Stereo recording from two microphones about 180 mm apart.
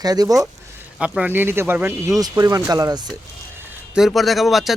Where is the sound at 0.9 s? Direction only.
5° right (ahead or behind); by 3.1 s 20° right (ahead or behind).